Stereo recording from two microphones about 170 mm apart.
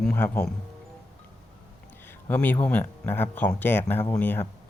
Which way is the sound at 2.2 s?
10° left (ahead or behind).